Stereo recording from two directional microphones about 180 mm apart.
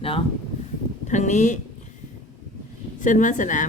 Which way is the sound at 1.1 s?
40° left (ahead or behind).